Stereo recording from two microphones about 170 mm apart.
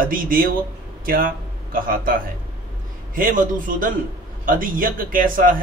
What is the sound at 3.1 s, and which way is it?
Speech, 55° right (ahead or behind).